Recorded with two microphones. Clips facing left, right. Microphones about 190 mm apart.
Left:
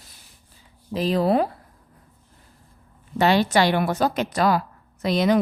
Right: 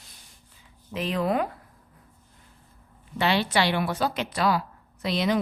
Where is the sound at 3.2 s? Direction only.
45° left (ahead or behind).